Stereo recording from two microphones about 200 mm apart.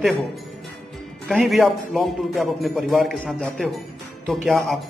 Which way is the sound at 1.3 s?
5° right (ahead or behind).